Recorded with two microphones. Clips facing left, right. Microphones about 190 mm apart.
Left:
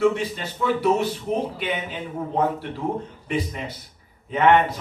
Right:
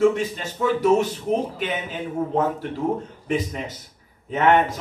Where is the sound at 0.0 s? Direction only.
45° right (ahead or behind).